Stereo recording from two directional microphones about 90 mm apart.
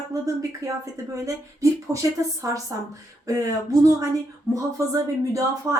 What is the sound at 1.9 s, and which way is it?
A woman's voice, 40° right (ahead or behind).